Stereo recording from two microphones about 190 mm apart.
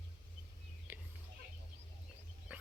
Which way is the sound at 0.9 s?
10° right (ahead or behind).